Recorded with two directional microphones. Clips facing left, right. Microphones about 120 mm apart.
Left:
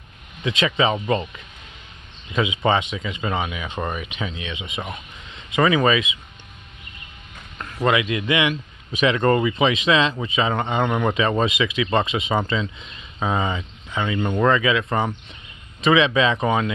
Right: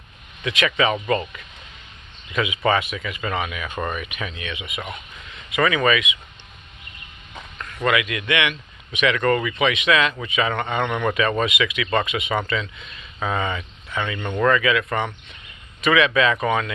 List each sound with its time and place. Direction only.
0.4 s a man's voice: 25° left (ahead or behind)
0.9 s speech: 10° left (ahead or behind)
2.3 s a man's voice: 25° left (ahead or behind)
7.5 s a man's voice: 25° left (ahead or behind)
13.9 s speech: 5° left (ahead or behind)
14.4 s a man's voice: 20° left (ahead or behind)